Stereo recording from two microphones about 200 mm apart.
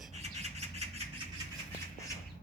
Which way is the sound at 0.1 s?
35° right (ahead or behind).